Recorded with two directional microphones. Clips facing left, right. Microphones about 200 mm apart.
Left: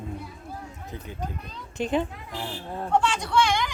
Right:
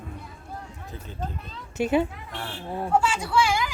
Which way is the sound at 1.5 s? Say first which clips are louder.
Right 3 dB; 10° right (ahead or behind).